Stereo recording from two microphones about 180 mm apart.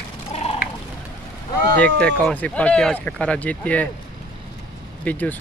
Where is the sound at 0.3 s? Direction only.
35° left (ahead or behind).